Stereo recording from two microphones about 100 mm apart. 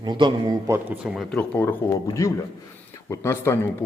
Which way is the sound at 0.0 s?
50° right (ahead or behind).